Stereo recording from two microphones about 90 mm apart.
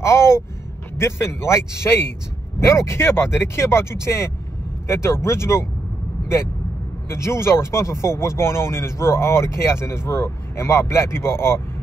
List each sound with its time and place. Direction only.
0.0 s speech: 30° left (ahead or behind)
7.1 s speech: 30° left (ahead or behind)